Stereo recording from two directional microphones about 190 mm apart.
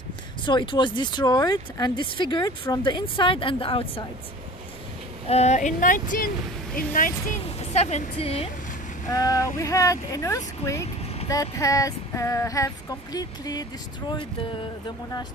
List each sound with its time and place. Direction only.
0.5 s speech: 25° left (ahead or behind)
5.3 s speech: 35° left (ahead or behind)
9.1 s a sound: 20° left (ahead or behind)